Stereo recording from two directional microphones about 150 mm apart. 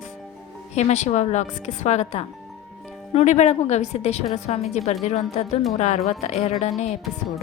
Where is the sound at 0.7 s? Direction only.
50° left (ahead or behind).